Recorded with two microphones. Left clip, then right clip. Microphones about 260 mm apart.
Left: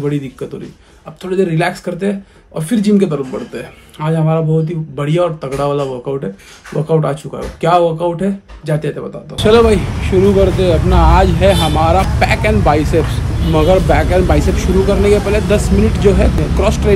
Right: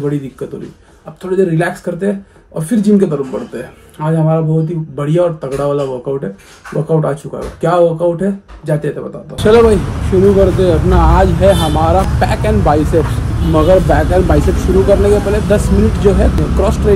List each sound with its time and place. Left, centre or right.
0.0 s speech: centre